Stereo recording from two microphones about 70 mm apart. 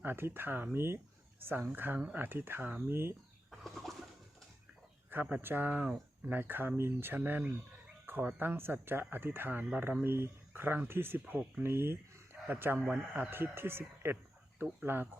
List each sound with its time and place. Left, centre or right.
0.0 s speech: right
3.5 s bird: centre
5.4 s speech: right
8.0 s a sound: right
8.4 s speech: right